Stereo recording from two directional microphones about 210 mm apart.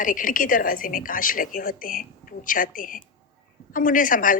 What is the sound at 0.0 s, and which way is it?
A woman's voice, 40° left (ahead or behind).